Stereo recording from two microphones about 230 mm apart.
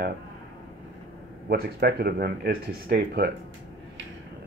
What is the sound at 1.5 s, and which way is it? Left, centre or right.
Speech, right.